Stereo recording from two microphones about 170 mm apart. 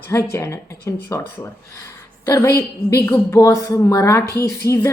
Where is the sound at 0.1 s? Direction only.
15° left (ahead or behind).